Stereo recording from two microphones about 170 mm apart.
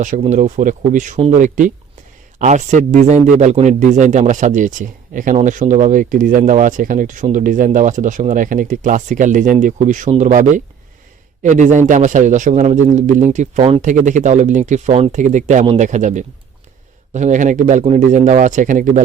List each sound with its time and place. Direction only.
0.0 s speech: 45° right (ahead or behind)
13.8 s speech: 45° right (ahead or behind)